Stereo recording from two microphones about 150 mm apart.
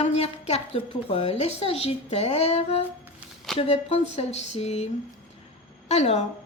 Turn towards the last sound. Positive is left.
turn(degrees=45)  # may be behind; listen again after turning